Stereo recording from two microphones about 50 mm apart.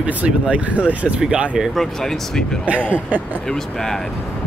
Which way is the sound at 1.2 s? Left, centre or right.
Right.